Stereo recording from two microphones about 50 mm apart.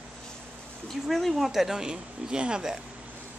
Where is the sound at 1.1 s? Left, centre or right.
Centre.